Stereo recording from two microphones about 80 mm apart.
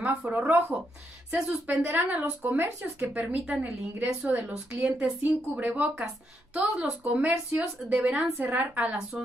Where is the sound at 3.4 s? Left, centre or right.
Centre.